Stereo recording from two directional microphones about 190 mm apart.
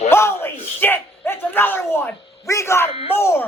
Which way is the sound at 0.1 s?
15° left (ahead or behind).